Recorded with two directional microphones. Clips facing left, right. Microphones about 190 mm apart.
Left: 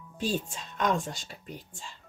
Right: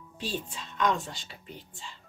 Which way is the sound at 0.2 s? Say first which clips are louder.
Left 4 dB; 45° left (ahead or behind).